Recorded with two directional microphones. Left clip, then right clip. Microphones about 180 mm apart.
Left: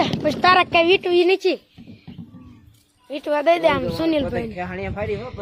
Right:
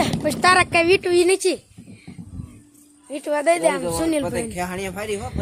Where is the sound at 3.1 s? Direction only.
Centre (ahead or behind).